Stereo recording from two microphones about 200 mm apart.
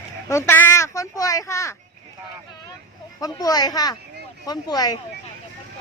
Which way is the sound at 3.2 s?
20° left (ahead or behind).